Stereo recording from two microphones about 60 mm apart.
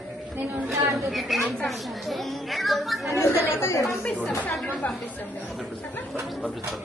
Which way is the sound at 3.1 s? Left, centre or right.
Left.